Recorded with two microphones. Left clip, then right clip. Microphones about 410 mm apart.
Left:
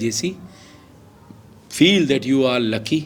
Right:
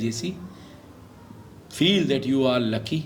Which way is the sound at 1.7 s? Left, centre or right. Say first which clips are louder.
Left 6 dB; left.